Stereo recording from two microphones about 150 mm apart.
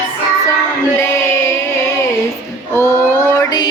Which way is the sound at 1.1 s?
20° left (ahead or behind).